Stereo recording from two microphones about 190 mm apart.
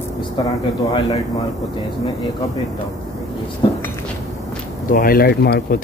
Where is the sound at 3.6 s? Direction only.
25° left (ahead or behind).